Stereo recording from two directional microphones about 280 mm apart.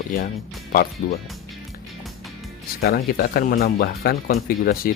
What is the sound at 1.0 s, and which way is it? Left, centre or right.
Speech, left.